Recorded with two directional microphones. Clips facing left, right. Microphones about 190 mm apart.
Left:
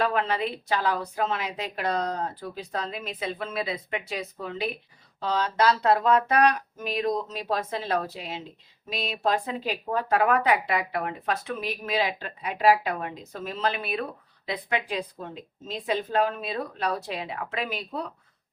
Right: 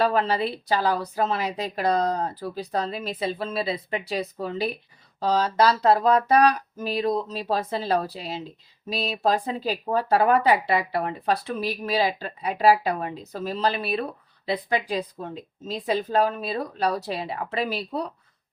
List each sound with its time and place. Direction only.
0.0 s speech: 35° right (ahead or behind)